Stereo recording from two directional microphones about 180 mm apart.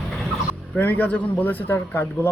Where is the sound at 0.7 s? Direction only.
10° left (ahead or behind).